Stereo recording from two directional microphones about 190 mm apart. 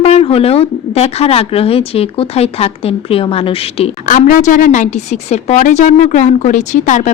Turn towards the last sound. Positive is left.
turn(degrees=40)  # may be behind; listen again after turning